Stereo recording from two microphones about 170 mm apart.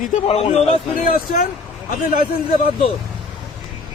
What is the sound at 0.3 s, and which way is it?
Speech, 40° left (ahead or behind).